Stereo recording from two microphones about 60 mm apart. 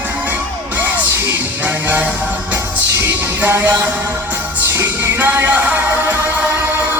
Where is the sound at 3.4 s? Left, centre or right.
Right.